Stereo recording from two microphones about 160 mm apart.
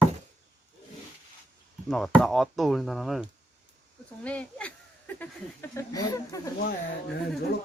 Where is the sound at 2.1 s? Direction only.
Centre (ahead or behind).